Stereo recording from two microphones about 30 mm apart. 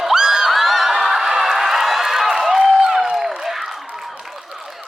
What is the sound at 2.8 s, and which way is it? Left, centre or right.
Music, right.